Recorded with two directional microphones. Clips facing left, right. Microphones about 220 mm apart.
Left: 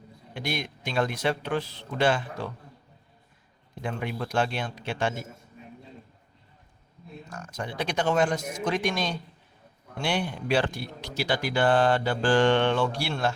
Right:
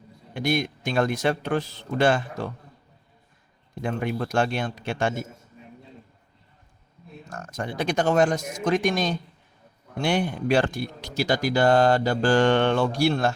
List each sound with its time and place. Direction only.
0.3 s a man's voice: 50° right (ahead or behind)
3.8 s a man's voice: 45° right (ahead or behind)
7.3 s a man's voice: 45° right (ahead or behind)